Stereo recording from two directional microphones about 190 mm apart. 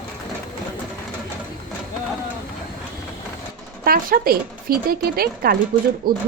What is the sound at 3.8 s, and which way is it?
Speech, 50° right (ahead or behind).